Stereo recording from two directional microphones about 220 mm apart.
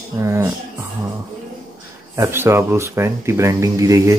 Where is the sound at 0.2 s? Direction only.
10° right (ahead or behind).